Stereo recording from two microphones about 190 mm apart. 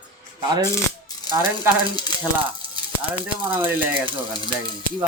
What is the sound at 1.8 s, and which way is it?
Speech, 20° left (ahead or behind).